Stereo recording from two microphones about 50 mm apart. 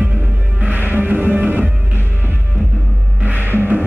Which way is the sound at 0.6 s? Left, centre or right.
Right.